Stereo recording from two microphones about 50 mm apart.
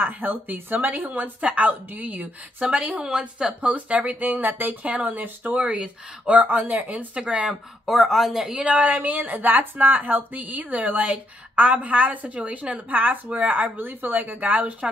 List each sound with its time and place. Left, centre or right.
0.0 s speech: right
3.1 s a woman's voice: centre
3.6 s speech: right
4.2 s speech: right
6.4 s speech: right; by 7.9 s centre
7.9 s speech: centre
8.5 s speech: right